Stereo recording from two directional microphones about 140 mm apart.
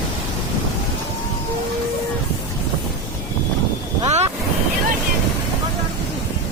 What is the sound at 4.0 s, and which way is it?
Boat, 50° right (ahead or behind).